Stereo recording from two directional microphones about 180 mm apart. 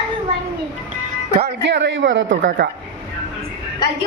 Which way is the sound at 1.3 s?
75° right (ahead or behind).